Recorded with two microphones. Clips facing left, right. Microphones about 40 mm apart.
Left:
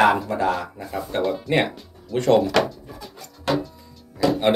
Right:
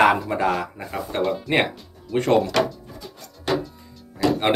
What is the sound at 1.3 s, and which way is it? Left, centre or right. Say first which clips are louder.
Speech: even; centre.